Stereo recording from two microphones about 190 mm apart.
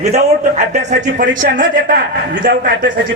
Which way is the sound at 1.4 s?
50° right (ahead or behind).